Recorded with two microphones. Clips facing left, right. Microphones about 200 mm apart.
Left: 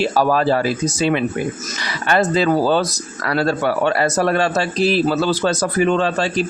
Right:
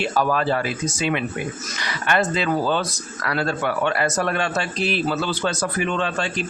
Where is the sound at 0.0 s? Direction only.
35° left (ahead or behind).